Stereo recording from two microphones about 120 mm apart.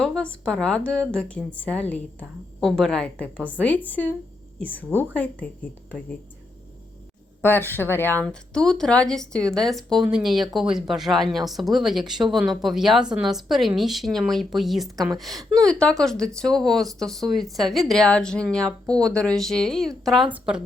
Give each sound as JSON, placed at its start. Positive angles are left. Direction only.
{"t": 0.0, "sound": "a woman's voice", "side_deg": 5}
{"t": 7.4, "sound": "a woman's voice", "side_deg": 15}
{"t": 8.2, "sound": "speech", "side_deg": 5}
{"t": 20.3, "sound": "speech", "side_deg": -5}